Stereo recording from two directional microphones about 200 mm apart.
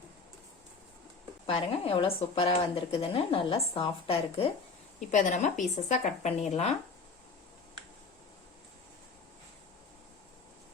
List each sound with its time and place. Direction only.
1.5 s a woman's voice: 30° left (ahead or behind)